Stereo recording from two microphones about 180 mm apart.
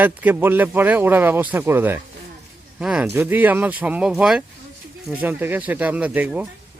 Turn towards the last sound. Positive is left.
turn(degrees=-10)  # may be behind; listen again after turning